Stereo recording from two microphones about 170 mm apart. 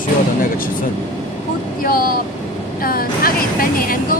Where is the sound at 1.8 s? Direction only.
55° left (ahead or behind).